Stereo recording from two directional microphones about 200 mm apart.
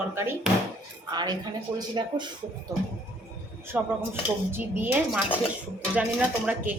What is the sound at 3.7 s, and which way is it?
Speech, 10° right (ahead or behind).